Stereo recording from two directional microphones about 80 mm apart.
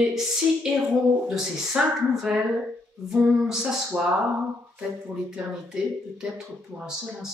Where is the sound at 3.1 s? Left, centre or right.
Centre.